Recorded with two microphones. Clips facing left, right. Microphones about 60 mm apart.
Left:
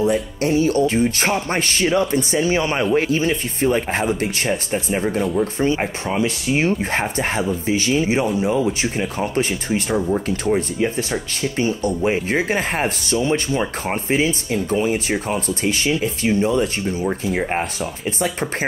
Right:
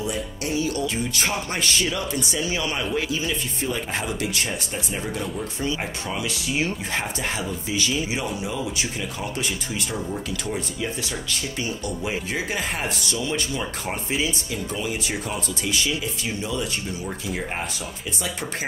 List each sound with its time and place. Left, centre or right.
0.0 s speech: left